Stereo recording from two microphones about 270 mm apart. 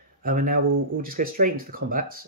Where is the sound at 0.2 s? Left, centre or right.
Right.